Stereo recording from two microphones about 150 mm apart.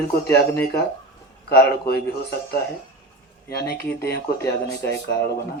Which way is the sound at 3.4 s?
90° left.